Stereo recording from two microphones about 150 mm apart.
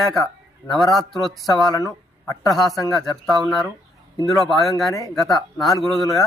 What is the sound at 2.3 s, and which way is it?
Speech, 25° left (ahead or behind).